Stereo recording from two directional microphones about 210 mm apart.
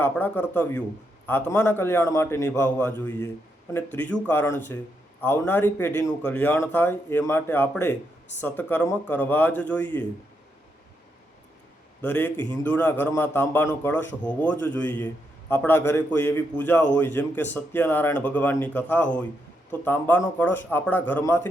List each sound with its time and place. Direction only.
0.0 s speech: 10° left (ahead or behind)
12.0 s speech: 10° left (ahead or behind)